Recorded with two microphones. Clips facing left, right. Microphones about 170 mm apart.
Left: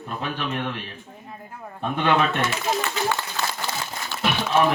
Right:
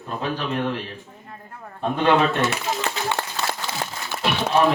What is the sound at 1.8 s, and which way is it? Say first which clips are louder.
Speech: right 3 dB; 35° right (ahead or behind).